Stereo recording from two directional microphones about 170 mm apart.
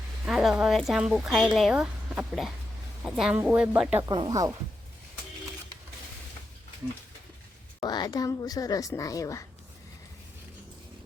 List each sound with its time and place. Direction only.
0.3 s speech: 5° right (ahead or behind)
4.0 s speech: 25° right (ahead or behind)
7.8 s speech: 25° left (ahead or behind)